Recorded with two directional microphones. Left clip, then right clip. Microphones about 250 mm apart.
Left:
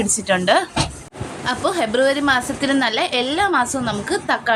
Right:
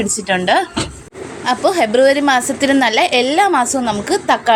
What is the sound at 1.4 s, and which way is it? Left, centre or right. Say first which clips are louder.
A woman's voice: right 6 dB; centre.